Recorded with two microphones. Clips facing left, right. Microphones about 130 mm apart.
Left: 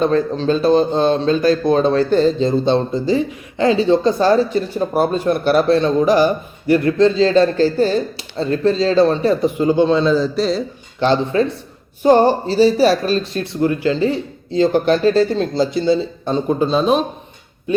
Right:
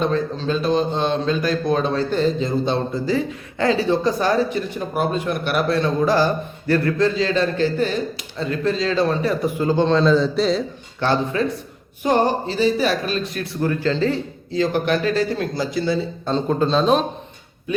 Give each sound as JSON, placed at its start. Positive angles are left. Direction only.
{"t": 0.4, "sound": "speech", "side_deg": 35}
{"t": 11.0, "sound": "speech", "side_deg": 25}
{"t": 14.5, "sound": "speech", "side_deg": 25}